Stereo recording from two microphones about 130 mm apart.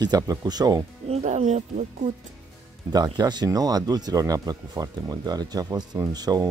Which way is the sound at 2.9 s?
30° right (ahead or behind).